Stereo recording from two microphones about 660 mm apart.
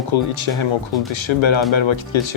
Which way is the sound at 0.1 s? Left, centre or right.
Left.